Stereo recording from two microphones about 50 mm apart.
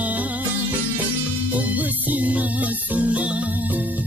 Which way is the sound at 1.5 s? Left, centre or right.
Right.